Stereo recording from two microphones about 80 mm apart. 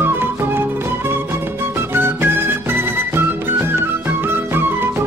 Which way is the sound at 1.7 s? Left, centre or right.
Right.